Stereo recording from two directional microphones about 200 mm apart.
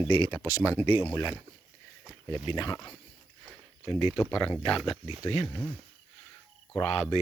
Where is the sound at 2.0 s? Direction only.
10° left (ahead or behind).